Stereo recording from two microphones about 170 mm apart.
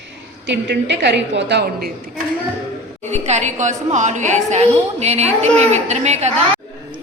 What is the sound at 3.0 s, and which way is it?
A woman's voice, 40° right (ahead or behind).